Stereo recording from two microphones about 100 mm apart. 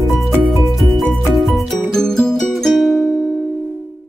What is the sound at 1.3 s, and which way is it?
Music, centre (ahead or behind).